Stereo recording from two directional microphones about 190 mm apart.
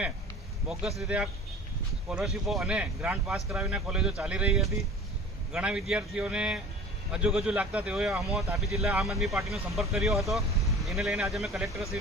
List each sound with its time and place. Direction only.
0.7 s speech: centre (ahead or behind)